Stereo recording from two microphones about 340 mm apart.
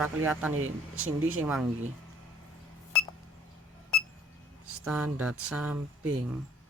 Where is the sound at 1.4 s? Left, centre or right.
Centre.